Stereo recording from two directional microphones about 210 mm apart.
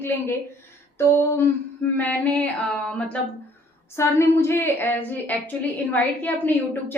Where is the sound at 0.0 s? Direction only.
10° left (ahead or behind).